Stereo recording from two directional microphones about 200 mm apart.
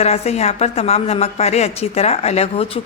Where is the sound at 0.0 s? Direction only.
30° left (ahead or behind).